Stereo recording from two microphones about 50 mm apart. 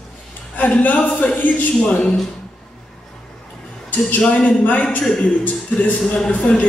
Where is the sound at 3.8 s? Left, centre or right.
Left.